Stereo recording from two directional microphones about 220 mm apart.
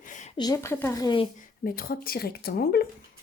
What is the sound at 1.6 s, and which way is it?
A woman's voice, 40° left (ahead or behind).